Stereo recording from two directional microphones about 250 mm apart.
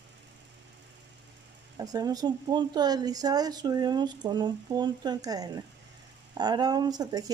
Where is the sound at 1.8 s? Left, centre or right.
Centre.